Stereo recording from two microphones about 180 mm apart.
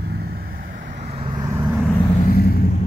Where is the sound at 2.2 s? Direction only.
55° left (ahead or behind).